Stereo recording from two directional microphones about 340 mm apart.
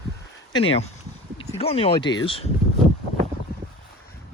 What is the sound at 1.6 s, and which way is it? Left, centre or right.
Speech, centre.